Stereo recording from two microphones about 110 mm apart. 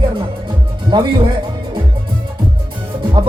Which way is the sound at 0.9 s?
40° right (ahead or behind).